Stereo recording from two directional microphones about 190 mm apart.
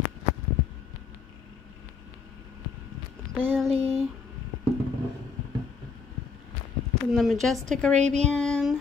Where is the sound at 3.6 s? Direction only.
30° right (ahead or behind).